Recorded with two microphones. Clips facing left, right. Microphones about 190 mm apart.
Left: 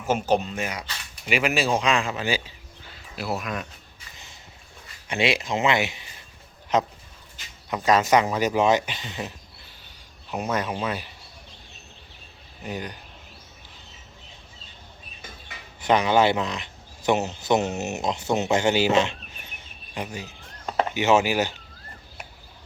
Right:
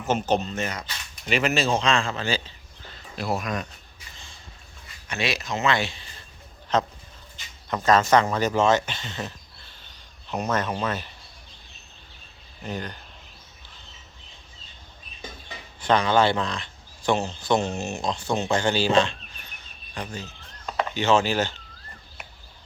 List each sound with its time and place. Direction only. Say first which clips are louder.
0.0 s speech: left 1 dB; 10° left (ahead or behind)
2.9 s a sound: right 2 dB; 5° left (ahead or behind)
5.0 s speech: left 4 dB; 25° left (ahead or behind); by 11.1 s 10° left (ahead or behind)
12.6 s speech: even; 15° left (ahead or behind)
15.9 s speech: left 1 dB; 15° left (ahead or behind)
19.6 s cricket: left 2 dB; 20° left (ahead or behind)
20.9 s speech: left 1 dB; 15° left (ahead or behind)